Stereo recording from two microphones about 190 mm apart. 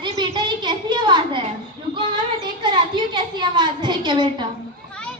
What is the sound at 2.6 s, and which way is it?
A woman's voice, 25° right (ahead or behind).